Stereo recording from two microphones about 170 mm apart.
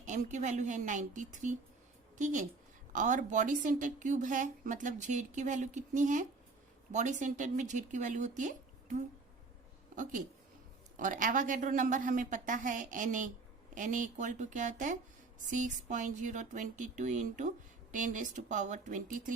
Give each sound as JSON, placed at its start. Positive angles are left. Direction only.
{"t": 0.0, "sound": "a woman's voice", "side_deg": -45}